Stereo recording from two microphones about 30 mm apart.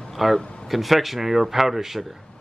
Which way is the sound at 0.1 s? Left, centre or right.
Centre.